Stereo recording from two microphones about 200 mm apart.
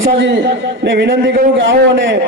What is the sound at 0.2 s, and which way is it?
A man's voice, 60° right (ahead or behind).